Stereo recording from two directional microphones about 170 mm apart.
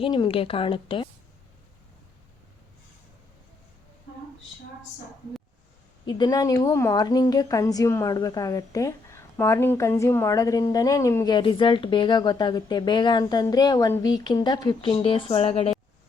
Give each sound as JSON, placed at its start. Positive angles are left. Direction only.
{"t": 0.0, "sound": "speech", "side_deg": 30}
{"t": 6.1, "sound": "a woman's voice", "side_deg": 25}